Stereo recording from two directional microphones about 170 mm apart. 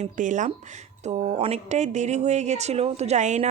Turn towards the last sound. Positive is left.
turn(degrees=-45)  # may be behind; listen again after turning